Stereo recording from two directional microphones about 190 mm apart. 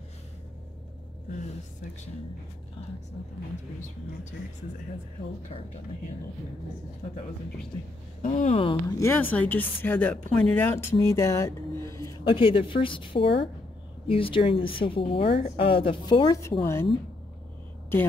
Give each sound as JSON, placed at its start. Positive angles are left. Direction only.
{"t": 8.2, "sound": "speech", "side_deg": 40}
{"t": 9.0, "sound": "speech", "side_deg": 10}
{"t": 12.3, "sound": "speech", "side_deg": 25}